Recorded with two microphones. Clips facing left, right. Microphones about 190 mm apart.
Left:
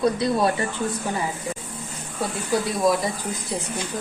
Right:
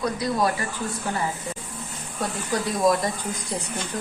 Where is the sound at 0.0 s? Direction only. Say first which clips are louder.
Left 3 dB; 25° left (ahead or behind).